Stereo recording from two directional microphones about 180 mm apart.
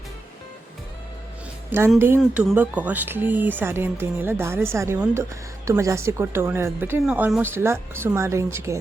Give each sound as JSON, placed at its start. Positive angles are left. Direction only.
{"t": 2.0, "sound": "speech", "side_deg": -10}